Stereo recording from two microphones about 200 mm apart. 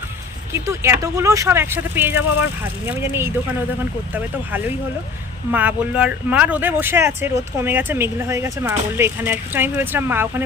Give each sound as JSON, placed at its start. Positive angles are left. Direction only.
{"t": 0.5, "sound": "speech", "side_deg": -15}